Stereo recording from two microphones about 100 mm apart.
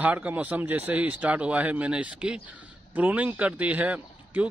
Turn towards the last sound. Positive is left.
turn(degrees=-15)  # may be behind; listen again after turning